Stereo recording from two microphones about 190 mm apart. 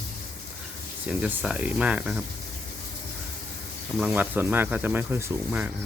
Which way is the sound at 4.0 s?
10° right (ahead or behind).